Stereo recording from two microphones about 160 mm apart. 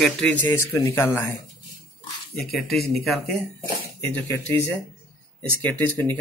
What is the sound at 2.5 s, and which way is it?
Speech, centre (ahead or behind).